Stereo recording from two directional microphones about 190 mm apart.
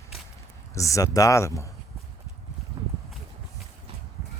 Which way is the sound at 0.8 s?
15° left (ahead or behind).